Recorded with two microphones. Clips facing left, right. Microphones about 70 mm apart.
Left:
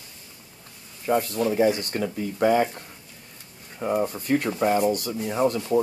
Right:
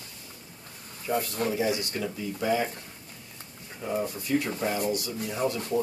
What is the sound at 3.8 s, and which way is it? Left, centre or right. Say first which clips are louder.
Speech: left 6 dB; left.